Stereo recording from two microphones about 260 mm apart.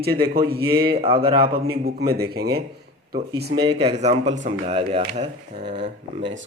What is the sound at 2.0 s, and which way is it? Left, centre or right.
Speech, right.